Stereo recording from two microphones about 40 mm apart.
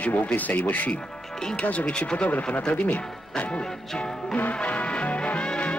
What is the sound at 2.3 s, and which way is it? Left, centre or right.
Music, left.